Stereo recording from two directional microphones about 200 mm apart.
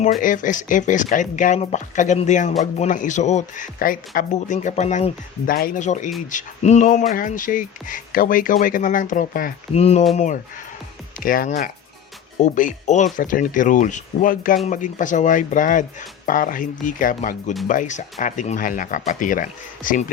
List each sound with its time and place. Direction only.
0.2 s speech: 40° left (ahead or behind)
9.7 s speech: 30° left (ahead or behind)